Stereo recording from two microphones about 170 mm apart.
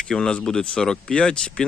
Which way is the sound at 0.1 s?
5° left (ahead or behind).